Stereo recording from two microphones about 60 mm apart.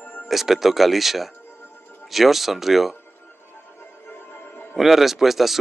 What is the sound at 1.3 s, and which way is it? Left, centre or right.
Music, left.